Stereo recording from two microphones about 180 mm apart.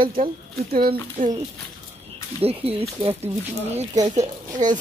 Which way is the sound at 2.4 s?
35° right (ahead or behind).